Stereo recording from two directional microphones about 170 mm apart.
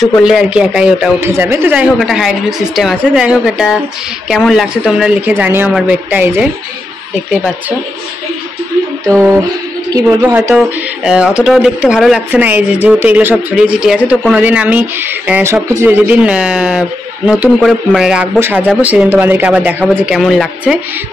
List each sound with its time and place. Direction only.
0.2 s a woman's voice: 5° right (ahead or behind)
9.1 s speech: 15° right (ahead or behind)
11.1 s a woman's voice: 5° right (ahead or behind)